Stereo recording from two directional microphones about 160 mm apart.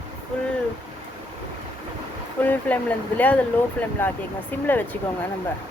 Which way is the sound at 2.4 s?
10° left (ahead or behind).